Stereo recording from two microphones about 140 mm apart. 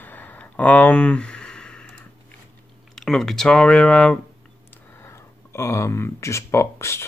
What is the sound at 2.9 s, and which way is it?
Speech, 5° left (ahead or behind).